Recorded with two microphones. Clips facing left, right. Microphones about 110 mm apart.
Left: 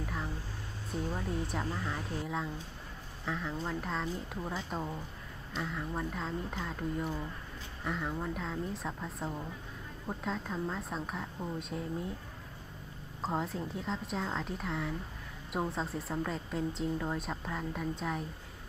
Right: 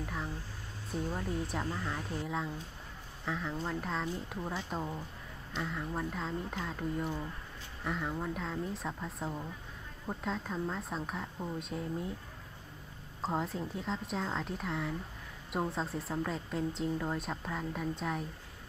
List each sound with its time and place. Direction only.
0.0 s speech: centre (ahead or behind)
13.2 s speech: centre (ahead or behind)